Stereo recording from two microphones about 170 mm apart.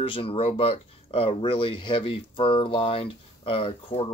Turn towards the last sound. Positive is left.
turn(degrees=35)  # may be behind; listen again after turning